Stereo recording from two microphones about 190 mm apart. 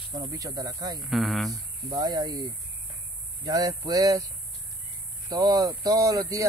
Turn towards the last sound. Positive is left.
turn(degrees=-20)  # may be behind; listen again after turning